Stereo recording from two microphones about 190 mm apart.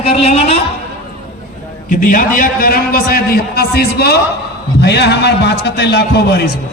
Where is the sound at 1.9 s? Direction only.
45° left (ahead or behind); by 6.4 s 60° left (ahead or behind).